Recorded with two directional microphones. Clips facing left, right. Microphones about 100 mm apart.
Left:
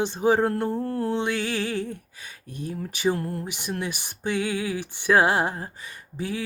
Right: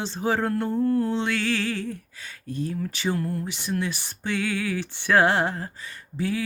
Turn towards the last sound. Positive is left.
turn(degrees=15)  # may be behind; listen again after turning